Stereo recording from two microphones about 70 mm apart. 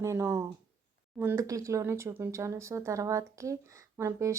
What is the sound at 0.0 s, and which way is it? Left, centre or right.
A woman's voice, right.